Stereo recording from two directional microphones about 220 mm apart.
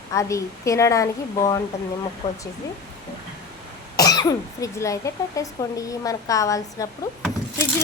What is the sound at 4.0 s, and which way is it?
Speech, 15° left (ahead or behind).